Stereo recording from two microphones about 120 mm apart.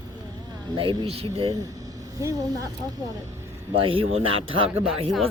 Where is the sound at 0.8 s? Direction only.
50° right (ahead or behind).